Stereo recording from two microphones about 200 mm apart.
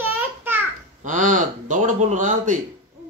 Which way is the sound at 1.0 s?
40° right (ahead or behind).